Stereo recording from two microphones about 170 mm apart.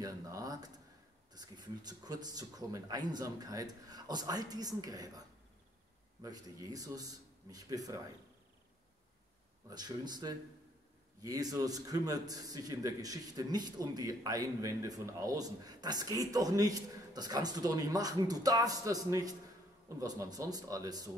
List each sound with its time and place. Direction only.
0.0 s a man's voice: 20° right (ahead or behind)
6.2 s a man's voice: 20° right (ahead or behind)
9.7 s a man's voice: 25° right (ahead or behind)